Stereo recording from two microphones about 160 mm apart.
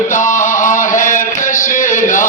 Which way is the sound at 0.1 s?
50° left (ahead or behind).